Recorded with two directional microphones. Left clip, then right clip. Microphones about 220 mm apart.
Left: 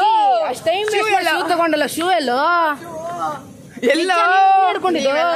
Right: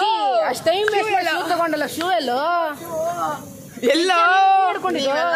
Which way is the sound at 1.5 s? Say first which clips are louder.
Left 4 dB; 45° left (ahead or behind).